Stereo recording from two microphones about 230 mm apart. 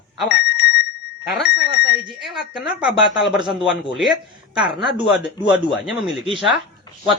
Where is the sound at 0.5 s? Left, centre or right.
Left.